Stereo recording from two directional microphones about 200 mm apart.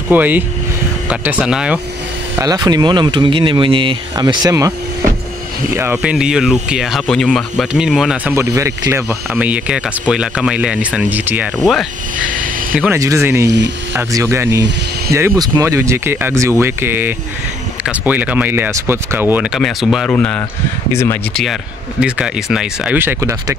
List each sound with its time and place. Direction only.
0.1 s speech: 10° right (ahead or behind)
2.3 s speech: 20° right (ahead or behind); by 8.4 s centre (ahead or behind)
8.4 s speech: 15° right (ahead or behind); by 21.2 s 15° left (ahead or behind)
22.0 s speech: 5° right (ahead or behind)